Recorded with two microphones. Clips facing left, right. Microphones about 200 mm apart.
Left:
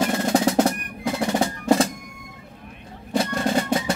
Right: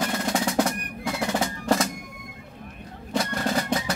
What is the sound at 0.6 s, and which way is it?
Percussion, 25° left (ahead or behind).